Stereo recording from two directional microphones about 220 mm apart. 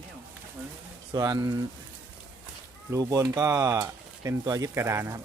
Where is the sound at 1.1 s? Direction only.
15° right (ahead or behind).